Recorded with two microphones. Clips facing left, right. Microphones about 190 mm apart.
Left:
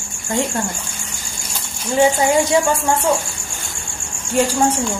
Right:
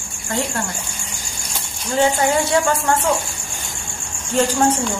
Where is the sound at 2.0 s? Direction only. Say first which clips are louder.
Left 3 dB; 15° left (ahead or behind).